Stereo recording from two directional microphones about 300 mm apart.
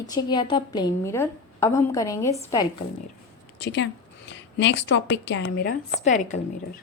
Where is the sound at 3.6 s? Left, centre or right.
Left.